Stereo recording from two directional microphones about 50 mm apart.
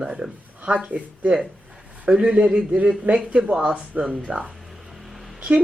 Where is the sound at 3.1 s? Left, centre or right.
Right.